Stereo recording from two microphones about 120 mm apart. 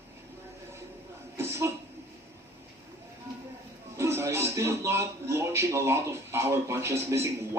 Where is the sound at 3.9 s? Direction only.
25° right (ahead or behind).